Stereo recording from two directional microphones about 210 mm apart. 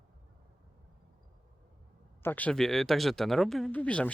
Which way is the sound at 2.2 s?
10° left (ahead or behind).